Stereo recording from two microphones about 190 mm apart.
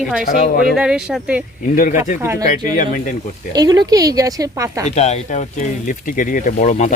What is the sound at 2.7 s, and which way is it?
Speech, 45° left (ahead or behind).